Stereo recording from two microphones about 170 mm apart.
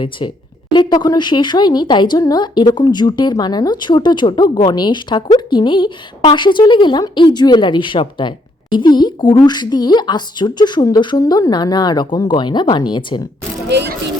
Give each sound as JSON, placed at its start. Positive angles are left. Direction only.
{"t": 0.7, "sound": "speech", "side_deg": 25}
{"t": 13.7, "sound": "speech", "side_deg": -90}